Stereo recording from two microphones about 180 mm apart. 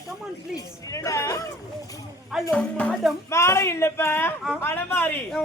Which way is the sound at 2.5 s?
5° left (ahead or behind).